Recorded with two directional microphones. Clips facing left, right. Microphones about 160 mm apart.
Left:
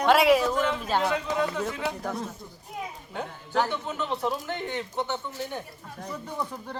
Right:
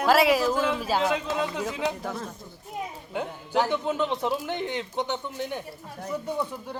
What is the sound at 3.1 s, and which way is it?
Speech, 10° right (ahead or behind).